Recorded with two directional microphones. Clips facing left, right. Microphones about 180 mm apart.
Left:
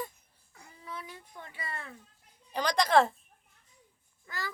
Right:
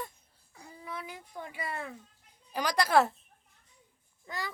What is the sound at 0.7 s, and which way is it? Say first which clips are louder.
A child's voice: right 2 dB; 10° right (ahead or behind).